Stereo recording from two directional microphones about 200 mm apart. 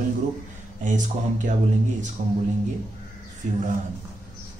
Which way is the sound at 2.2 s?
40° right (ahead or behind).